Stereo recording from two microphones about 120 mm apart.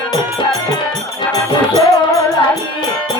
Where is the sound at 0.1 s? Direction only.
35° left (ahead or behind).